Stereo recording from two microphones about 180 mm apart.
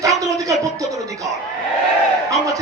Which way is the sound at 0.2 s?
20° right (ahead or behind).